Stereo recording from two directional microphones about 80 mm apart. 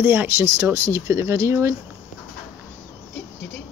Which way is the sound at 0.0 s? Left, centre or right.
Right.